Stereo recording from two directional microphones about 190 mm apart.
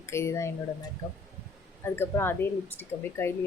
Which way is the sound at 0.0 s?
15° left (ahead or behind).